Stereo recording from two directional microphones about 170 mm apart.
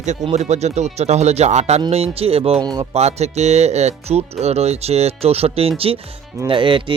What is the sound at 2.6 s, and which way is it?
Speech, 25° right (ahead or behind).